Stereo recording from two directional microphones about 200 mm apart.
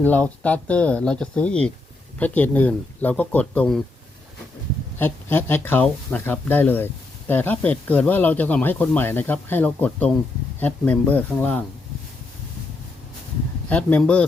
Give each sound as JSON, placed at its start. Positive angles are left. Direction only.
{"t": 0.0, "sound": "speech", "side_deg": 10}
{"t": 4.9, "sound": "speech", "side_deg": 10}
{"t": 13.7, "sound": "speech", "side_deg": 5}